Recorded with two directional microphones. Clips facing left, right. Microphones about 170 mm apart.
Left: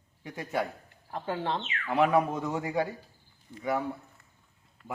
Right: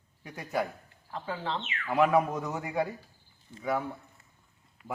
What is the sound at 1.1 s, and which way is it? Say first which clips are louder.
Speech: left 3 dB; 15° left (ahead or behind).